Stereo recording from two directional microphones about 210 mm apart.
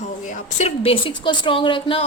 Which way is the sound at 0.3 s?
35° left (ahead or behind).